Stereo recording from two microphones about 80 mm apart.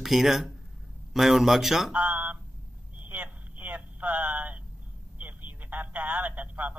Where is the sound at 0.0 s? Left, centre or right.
Centre.